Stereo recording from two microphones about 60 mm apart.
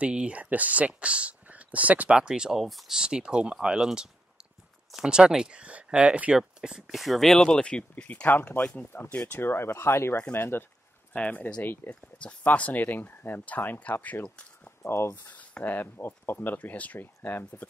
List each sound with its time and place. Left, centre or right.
0.0 s speech: centre
2.1 s speech: centre
6.3 s speech: centre; by 8.3 s left
8.3 s speech: left
9.3 s speech: left
11.1 s speech: left
11.9 s speech: left
14.2 s speech: centre
14.9 s speech: left
15.1 s speech: left